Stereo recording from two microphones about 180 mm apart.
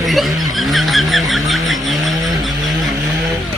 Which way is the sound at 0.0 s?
Centre (ahead or behind).